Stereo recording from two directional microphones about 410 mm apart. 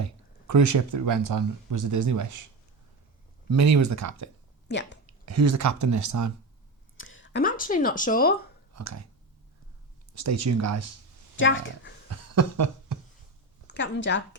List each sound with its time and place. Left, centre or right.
0.0 s speech: right
3.5 s speech: right
4.7 s speech: left
5.0 s speech: right
6.9 s speech: left
8.7 s a sound: right
10.2 s speech: right
11.3 s speech: left
12.0 s a sound: right
13.7 s a woman's voice: left